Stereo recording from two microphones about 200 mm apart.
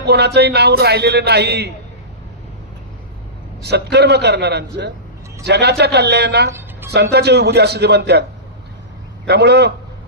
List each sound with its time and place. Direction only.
0.0 s a man's voice: 55° right (ahead or behind)
3.6 s a man's voice: 55° right (ahead or behind)
6.5 s music: 10° right (ahead or behind)
6.9 s a man's voice: 55° right (ahead or behind)
9.2 s a man's voice: 55° right (ahead or behind)